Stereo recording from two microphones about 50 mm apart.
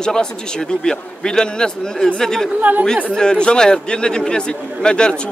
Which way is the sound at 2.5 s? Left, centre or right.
Right.